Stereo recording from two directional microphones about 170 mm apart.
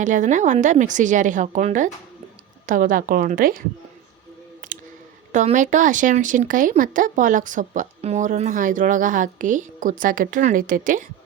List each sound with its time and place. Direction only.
0.0 s speech: 50° right (ahead or behind)
4.6 s a sound: 50° right (ahead or behind)
5.3 s speech: 45° right (ahead or behind)